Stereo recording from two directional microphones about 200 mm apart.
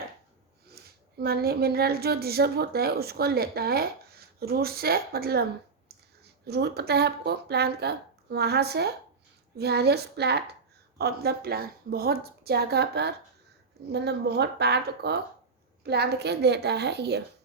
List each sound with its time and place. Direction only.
0.7 s a woman's voice: 50° right (ahead or behind)